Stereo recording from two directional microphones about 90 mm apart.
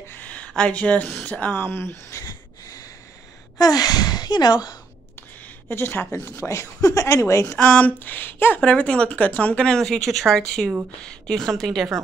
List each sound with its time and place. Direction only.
0.0 s a sound: 20° left (ahead or behind)
1.2 s speech: 20° left (ahead or behind)
2.2 s a sound: 45° left (ahead or behind)
3.5 s a woman's voice: 45° left (ahead or behind)
5.7 s speech: 25° left (ahead or behind)
7.5 s speech: 15° left (ahead or behind)